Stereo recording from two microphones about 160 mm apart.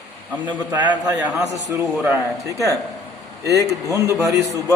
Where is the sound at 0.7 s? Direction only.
10° right (ahead or behind).